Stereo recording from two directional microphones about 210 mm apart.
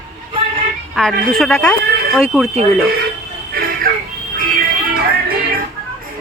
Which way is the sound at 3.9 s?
45° right (ahead or behind).